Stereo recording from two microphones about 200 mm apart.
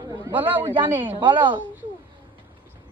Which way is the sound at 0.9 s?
25° right (ahead or behind).